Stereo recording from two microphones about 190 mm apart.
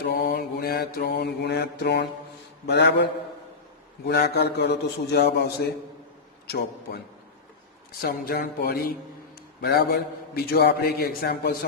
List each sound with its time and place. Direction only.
0.0 s mantra: 55° left (ahead or behind)
8.0 s a sound: 50° left (ahead or behind)
9.6 s mantra: 55° left (ahead or behind)